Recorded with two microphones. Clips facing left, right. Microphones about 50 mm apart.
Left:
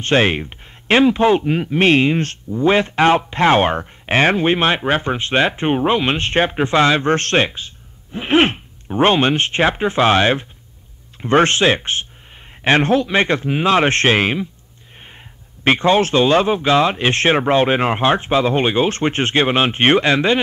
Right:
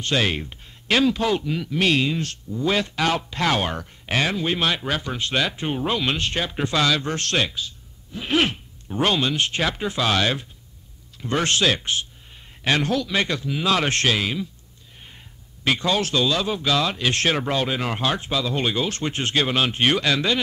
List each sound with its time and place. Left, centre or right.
0.0 s speech: left
15.6 s speech: left